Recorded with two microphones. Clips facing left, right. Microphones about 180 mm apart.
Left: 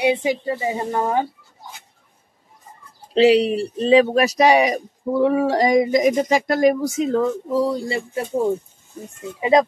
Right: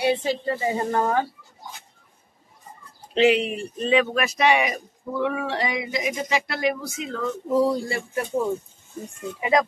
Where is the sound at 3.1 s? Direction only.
35° left (ahead or behind).